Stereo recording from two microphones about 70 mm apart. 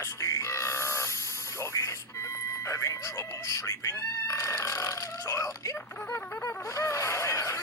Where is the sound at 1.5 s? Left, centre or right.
Left.